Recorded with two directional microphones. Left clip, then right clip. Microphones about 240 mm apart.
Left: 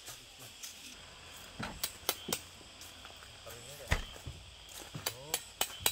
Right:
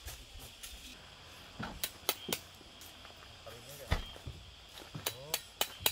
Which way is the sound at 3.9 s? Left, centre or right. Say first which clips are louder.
Left 3 dB; left.